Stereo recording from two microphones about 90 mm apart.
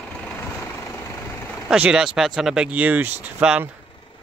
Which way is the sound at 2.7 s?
20° right (ahead or behind).